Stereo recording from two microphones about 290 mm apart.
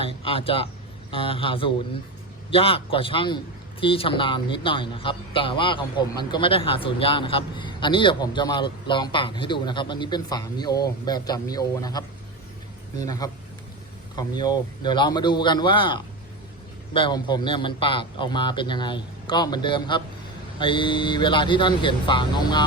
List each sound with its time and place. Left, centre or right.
0.0 s a man's voice: centre